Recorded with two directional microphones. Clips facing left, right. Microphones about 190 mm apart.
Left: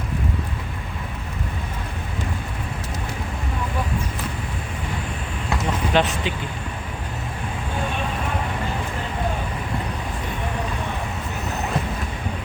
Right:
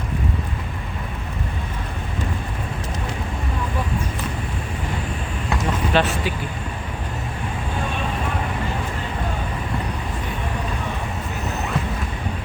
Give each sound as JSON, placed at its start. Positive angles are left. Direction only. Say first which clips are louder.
{"t": 5.9, "sound": "speech", "louder": "even", "side_deg": 15}